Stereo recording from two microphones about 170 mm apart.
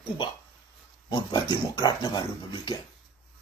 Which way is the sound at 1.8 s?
25° left (ahead or behind).